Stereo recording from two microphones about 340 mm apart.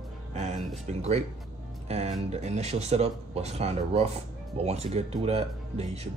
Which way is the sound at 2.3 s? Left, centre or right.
Centre.